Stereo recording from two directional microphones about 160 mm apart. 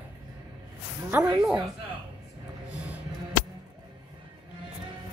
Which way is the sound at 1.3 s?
25° right (ahead or behind).